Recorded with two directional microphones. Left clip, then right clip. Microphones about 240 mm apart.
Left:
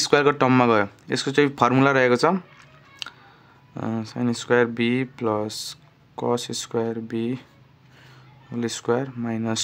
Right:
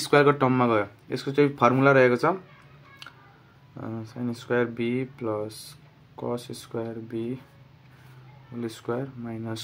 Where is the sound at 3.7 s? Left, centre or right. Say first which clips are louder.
Left 7 dB; left.